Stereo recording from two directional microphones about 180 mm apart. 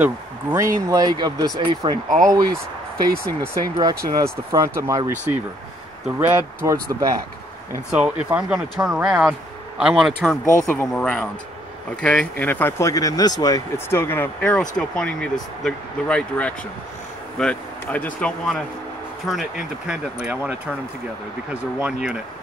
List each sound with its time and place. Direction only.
0.0 s speech: 15° right (ahead or behind)
3.8 s speech: 15° right (ahead or behind)
7.9 s speech: 5° right (ahead or behind)
21.7 s speech: 5° right (ahead or behind)